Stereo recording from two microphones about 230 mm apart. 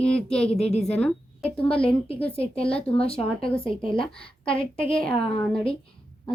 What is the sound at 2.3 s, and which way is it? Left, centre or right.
Speech, left.